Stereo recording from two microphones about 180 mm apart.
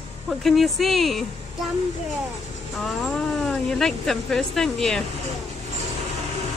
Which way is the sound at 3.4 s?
Centre (ahead or behind).